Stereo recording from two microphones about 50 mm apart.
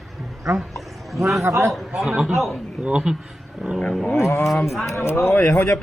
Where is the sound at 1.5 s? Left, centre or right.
Right.